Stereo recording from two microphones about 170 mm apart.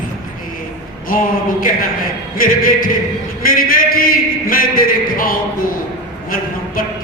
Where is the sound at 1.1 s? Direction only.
55° left (ahead or behind).